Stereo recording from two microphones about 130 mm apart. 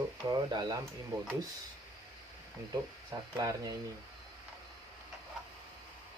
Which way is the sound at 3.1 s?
25° right (ahead or behind).